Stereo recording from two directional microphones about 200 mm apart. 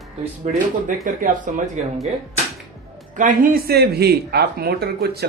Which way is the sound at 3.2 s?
40° right (ahead or behind).